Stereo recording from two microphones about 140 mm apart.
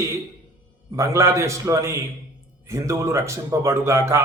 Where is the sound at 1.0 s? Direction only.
20° right (ahead or behind).